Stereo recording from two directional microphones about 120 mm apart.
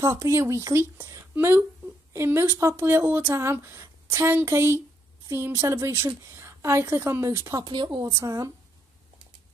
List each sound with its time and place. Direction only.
0.2 s speech: 25° right (ahead or behind)
7.6 s a woman's voice: 40° right (ahead or behind)
8.2 s speech: 25° right (ahead or behind)